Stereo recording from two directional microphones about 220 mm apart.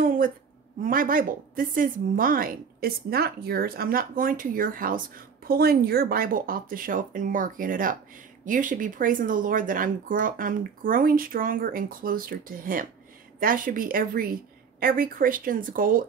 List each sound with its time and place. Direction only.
0.7 s a woman's voice: 40° right (ahead or behind)